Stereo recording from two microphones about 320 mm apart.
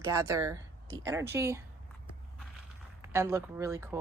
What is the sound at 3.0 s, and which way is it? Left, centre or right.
Speech, centre.